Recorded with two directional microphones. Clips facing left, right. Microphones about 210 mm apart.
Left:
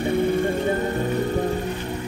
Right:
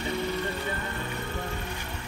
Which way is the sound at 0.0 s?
50° left (ahead or behind).